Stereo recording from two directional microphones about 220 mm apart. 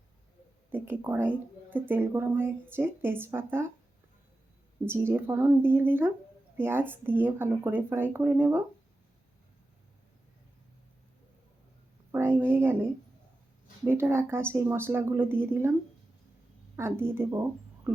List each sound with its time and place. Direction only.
0.7 s speech: 10° right (ahead or behind)
4.9 s speech: 10° right (ahead or behind)
12.1 s a sound: 10° right (ahead or behind)
13.8 s speech: 10° right (ahead or behind)
16.7 s speech: 10° right (ahead or behind)